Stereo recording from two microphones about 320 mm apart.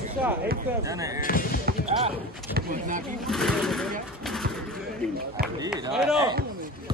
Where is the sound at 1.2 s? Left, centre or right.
Left.